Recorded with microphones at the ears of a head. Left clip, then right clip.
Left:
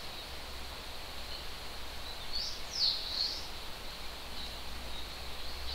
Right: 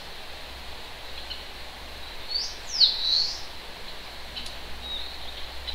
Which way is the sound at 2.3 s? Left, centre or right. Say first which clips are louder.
Right 11 dB; right.